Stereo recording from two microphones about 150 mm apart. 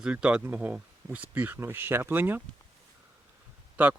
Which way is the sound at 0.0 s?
5° right (ahead or behind).